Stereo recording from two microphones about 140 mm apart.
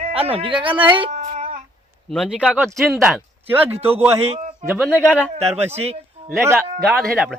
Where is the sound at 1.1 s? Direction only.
55° right (ahead or behind).